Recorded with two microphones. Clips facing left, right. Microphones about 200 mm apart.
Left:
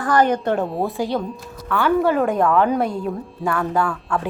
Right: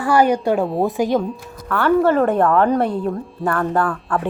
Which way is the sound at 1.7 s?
Centre (ahead or behind).